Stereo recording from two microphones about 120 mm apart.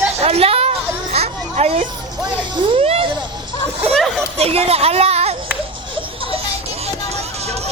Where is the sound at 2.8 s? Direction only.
60° right (ahead or behind).